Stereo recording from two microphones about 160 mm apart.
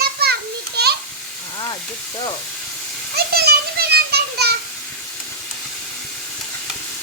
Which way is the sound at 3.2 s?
85° right.